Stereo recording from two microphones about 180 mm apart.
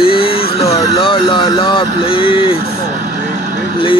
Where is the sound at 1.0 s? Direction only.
30° left (ahead or behind).